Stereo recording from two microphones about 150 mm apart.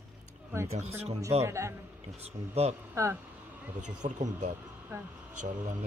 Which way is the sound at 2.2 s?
45° right (ahead or behind).